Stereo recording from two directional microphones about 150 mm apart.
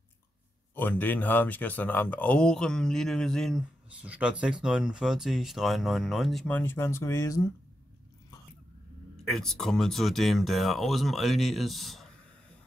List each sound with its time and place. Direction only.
0.7 s speech: 15° left (ahead or behind)
3.9 s speech: 10° right (ahead or behind); by 7.4 s 20° left (ahead or behind)
9.2 s speech: centre (ahead or behind)